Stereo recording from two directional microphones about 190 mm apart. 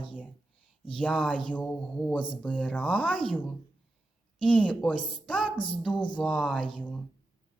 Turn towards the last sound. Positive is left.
turn(degrees=5)  # may be behind; listen again after turning